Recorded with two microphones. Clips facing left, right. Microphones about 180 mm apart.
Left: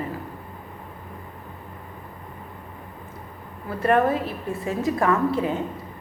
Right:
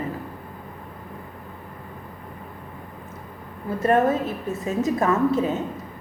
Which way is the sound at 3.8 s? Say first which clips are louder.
Right 1 dB; 25° right (ahead or behind).